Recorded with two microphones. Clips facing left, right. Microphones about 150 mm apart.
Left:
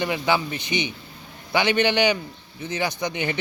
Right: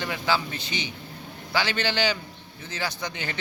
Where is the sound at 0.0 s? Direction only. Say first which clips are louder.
Left 4 dB; 15° left (ahead or behind).